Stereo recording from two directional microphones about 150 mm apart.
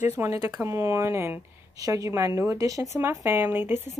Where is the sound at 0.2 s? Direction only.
15° right (ahead or behind).